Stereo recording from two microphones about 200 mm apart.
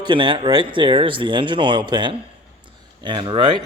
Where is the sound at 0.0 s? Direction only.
25° right (ahead or behind).